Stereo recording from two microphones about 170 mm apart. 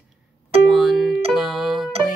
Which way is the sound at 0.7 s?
Centre (ahead or behind).